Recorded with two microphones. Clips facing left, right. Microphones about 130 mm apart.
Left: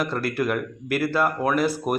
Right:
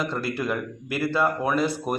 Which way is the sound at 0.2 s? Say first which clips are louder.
Left 3 dB; 25° right (ahead or behind).